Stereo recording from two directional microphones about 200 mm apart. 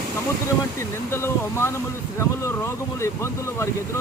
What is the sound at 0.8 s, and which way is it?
Speech, 15° left (ahead or behind).